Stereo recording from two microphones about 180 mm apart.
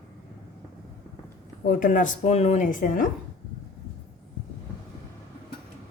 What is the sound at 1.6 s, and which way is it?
A woman's voice, 45° left (ahead or behind).